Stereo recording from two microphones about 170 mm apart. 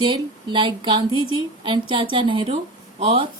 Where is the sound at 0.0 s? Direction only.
30° right (ahead or behind).